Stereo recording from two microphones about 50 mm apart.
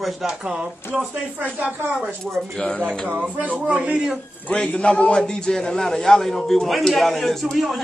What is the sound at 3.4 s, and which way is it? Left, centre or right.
Speech, right.